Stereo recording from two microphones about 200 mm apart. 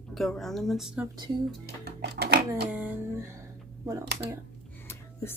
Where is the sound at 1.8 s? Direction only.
55° right (ahead or behind).